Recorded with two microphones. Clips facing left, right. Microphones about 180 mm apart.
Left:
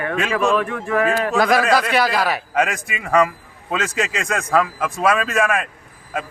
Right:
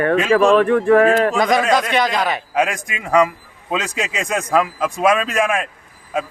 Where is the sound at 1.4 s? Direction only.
5° left (ahead or behind).